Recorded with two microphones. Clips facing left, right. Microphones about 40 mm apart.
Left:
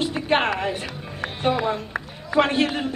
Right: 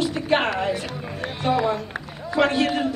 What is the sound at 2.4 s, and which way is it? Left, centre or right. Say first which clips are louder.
Speech: left 1 dB; left.